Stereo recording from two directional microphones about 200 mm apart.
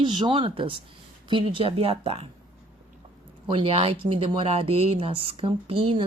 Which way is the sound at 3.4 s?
30° right (ahead or behind).